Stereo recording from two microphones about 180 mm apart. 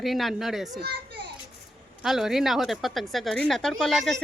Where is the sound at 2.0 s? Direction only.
Centre (ahead or behind).